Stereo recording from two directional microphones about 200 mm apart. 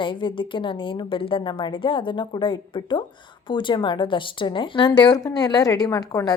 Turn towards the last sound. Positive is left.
turn(degrees=15)  # may be behind; listen again after turning